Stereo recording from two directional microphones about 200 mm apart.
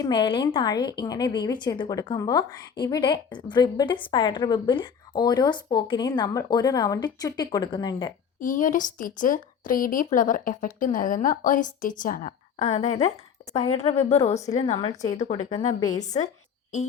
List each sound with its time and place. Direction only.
0.0 s a woman's voice: 25° left (ahead or behind)
8.4 s a woman's voice: 40° left (ahead or behind)